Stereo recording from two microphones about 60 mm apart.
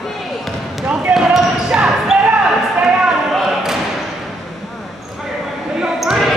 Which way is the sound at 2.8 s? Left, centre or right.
Centre.